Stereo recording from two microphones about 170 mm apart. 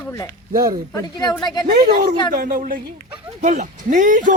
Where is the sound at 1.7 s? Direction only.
65° right (ahead or behind).